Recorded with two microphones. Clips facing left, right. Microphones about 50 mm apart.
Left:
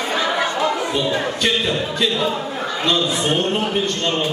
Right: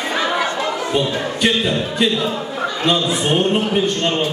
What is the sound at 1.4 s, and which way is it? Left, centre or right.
Speech, centre.